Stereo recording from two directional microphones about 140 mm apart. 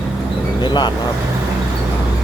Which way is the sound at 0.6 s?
30° left (ahead or behind).